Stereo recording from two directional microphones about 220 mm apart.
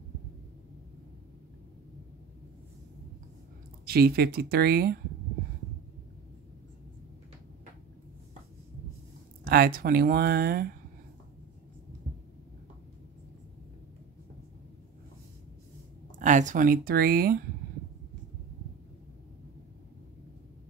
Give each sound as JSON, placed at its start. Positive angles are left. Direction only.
{"t": 3.8, "sound": "speech", "side_deg": -45}
{"t": 9.5, "sound": "speech", "side_deg": -45}
{"t": 16.2, "sound": "speech", "side_deg": -35}